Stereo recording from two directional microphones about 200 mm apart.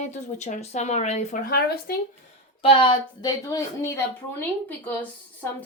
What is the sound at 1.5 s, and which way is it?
Speech, 50° left (ahead or behind).